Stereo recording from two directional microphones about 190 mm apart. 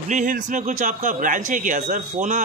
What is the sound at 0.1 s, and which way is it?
A man's voice, 40° right (ahead or behind).